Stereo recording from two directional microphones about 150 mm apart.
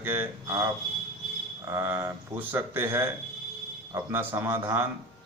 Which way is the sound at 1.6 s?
15° right (ahead or behind).